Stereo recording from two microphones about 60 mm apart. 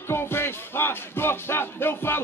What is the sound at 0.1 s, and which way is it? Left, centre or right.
Music, left.